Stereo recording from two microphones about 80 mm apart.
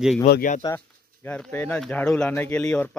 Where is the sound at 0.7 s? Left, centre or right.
Left.